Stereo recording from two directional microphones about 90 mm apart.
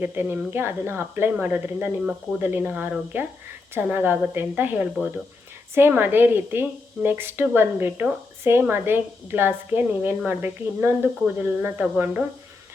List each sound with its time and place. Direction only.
0.0 s a woman's voice: 20° right (ahead or behind)